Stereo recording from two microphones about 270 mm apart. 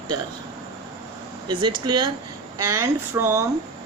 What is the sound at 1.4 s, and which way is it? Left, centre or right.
Speech, centre.